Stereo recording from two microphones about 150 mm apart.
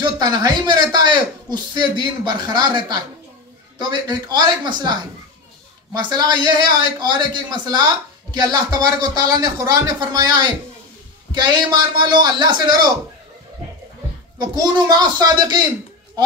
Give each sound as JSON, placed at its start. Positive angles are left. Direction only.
{"t": 0.0, "sound": "a man's voice", "side_deg": -25}
{"t": 5.9, "sound": "speech", "side_deg": -30}
{"t": 14.4, "sound": "speech", "side_deg": -25}